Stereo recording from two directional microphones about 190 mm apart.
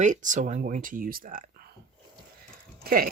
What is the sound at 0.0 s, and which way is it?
Speech, 40° right (ahead or behind).